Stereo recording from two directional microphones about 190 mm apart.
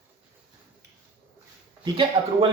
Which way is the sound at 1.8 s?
25° right (ahead or behind).